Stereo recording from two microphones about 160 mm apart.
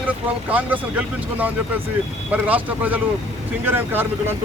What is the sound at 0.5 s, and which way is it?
Speech, 10° right (ahead or behind).